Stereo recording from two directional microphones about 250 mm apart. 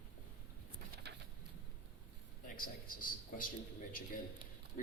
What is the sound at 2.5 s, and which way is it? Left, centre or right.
Speech, left.